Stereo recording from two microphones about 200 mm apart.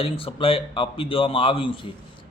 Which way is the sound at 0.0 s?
25° left (ahead or behind).